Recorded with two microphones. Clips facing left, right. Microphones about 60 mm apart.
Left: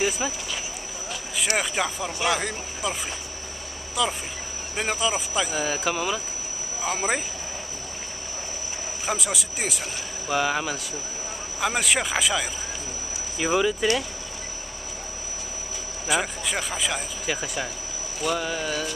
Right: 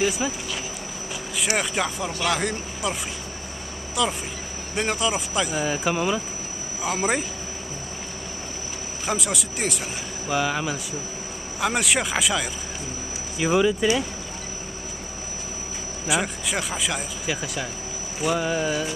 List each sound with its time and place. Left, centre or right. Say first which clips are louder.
0.2 s speech: right 2 dB; centre
1.6 s speech: right 1 dB; centre
9.0 s speech: right 2 dB; centre
16.1 s speech: right 1 dB; centre
18.2 s a sound: right 3 dB; centre